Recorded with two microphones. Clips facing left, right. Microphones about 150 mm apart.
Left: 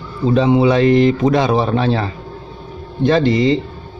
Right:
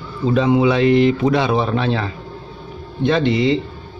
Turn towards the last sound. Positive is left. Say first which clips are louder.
# left 3 dB
turn(degrees=40)  # may be behind; listen again after turning